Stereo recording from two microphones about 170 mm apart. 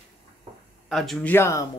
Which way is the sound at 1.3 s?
15° left (ahead or behind).